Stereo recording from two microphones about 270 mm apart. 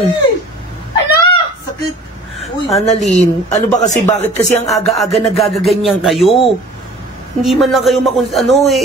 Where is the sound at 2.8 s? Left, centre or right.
Left.